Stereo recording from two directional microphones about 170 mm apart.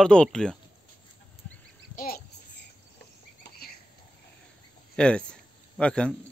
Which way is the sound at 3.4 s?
65° left (ahead or behind).